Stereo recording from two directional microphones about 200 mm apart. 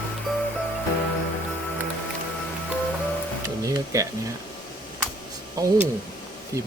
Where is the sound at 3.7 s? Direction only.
15° right (ahead or behind).